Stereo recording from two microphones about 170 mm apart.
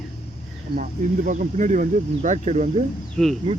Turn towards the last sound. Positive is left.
turn(degrees=0)  # may be behind; listen again after turning